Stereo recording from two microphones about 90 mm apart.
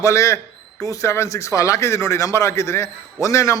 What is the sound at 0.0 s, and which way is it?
Speech, 35° left (ahead or behind).